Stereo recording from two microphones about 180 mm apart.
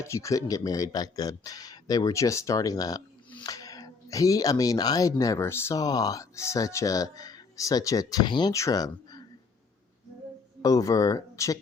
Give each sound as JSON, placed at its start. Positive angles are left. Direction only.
{"t": 0.0, "sound": "speech", "side_deg": 15}
{"t": 10.6, "sound": "speech", "side_deg": 20}